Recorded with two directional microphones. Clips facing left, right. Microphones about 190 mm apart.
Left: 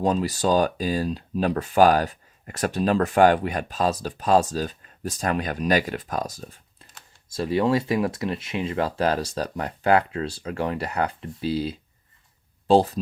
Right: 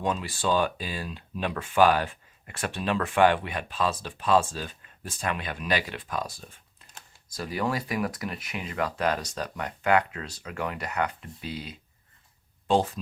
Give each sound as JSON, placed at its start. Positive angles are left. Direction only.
{"t": 0.0, "sound": "speech", "side_deg": 35}
{"t": 7.3, "sound": "speech", "side_deg": 25}